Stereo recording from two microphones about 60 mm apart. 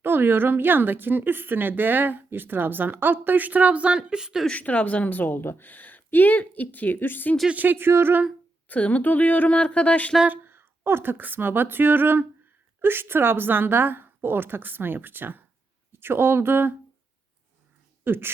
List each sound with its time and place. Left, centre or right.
0.0 s a woman's voice: right; by 4.4 s centre
4.4 s a woman's voice: left
7.5 s a woman's voice: right
8.6 s a woman's voice: left
10.2 s a woman's voice: right
18.0 s speech: right